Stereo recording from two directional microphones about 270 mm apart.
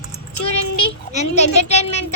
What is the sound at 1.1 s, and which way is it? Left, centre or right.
Speech, left.